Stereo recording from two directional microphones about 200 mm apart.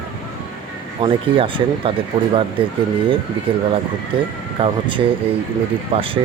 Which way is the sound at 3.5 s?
25° right (ahead or behind).